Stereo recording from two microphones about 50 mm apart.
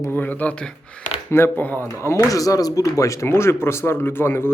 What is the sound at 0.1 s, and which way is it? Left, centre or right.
Speech, left.